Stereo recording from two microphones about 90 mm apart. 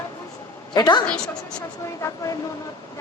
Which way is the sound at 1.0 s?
10° left (ahead or behind).